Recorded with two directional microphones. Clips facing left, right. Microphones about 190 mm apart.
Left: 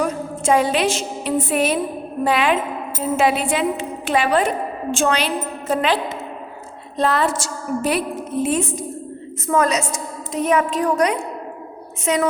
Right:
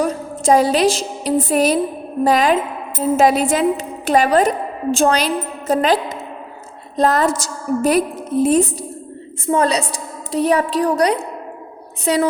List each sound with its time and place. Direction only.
0.0 s a woman's voice: 35° right (ahead or behind)